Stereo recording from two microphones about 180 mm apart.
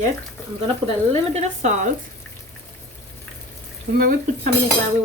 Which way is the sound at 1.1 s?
35° right (ahead or behind).